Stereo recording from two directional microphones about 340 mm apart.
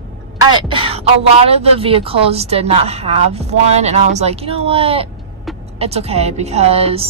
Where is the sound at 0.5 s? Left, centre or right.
Centre.